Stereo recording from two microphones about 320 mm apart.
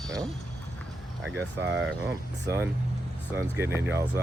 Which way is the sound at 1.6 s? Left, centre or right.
Right.